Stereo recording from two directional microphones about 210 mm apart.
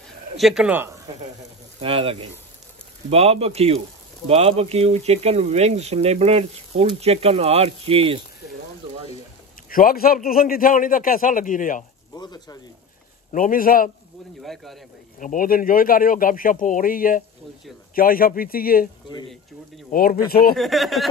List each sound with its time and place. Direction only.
0.4 s speech: centre (ahead or behind)
1.8 s speech: 25° right (ahead or behind)
9.7 s a man's voice: 45° left (ahead or behind)
12.1 s speech: 20° left (ahead or behind)
13.3 s speech: 40° left (ahead or behind)
14.4 s speech: centre (ahead or behind)
15.1 s a man's voice: 40° left (ahead or behind)
19.9 s speech: 45° left (ahead or behind)
20.5 s speech: centre (ahead or behind)